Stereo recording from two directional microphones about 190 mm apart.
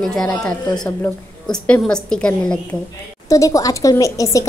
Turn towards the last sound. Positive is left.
turn(degrees=15)  # may be behind; listen again after turning